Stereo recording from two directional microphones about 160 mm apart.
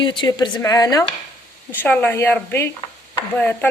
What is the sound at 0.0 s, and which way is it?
A woman's voice, 30° left (ahead or behind).